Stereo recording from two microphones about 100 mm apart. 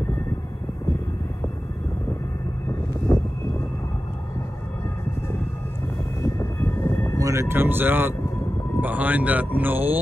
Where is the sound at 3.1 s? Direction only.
25° left (ahead or behind).